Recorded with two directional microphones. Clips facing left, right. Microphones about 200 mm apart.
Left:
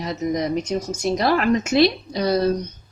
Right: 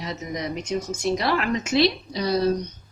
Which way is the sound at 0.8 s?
40° left (ahead or behind).